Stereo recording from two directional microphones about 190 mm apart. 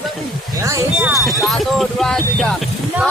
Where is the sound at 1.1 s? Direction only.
Centre (ahead or behind).